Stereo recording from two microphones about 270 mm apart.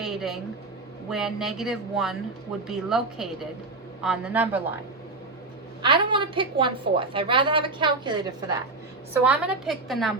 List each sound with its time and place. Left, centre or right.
0.0 s a sound: centre
1.1 s speech: centre
5.8 s a woman's voice: centre
9.2 s speech: centre